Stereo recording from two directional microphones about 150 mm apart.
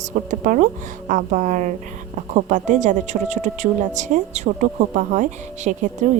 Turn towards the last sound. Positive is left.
turn(degrees=-55)  # may be behind; listen again after turning